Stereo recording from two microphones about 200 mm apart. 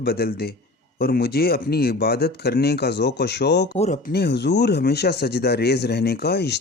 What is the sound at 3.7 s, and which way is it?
Speech, 35° left (ahead or behind).